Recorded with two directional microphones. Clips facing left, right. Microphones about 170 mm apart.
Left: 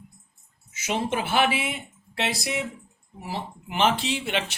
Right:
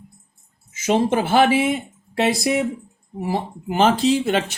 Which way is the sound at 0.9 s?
45° right (ahead or behind).